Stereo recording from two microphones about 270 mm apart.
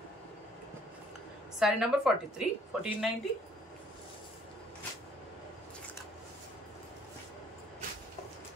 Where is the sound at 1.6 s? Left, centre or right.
Centre.